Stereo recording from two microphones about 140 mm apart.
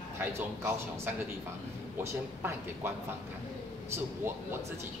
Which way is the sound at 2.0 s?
20° right (ahead or behind).